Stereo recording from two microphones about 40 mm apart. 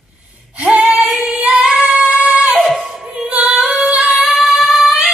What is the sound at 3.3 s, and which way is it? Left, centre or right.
Female singing, right.